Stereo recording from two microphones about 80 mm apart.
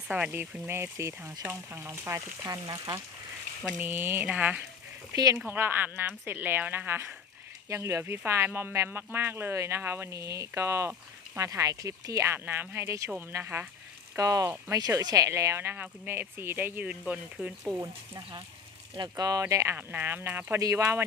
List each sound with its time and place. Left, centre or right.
0.1 s a woman's voice: right
0.7 s speech: right
3.8 s a woman's voice: right
5.1 s speech: right
5.5 s a woman's voice: right
14.2 s speech: right
15.7 s a woman's voice: right
17.4 s speech: centre
18.9 s speech: right
19.7 s a woman's voice: right
20.6 s speech: right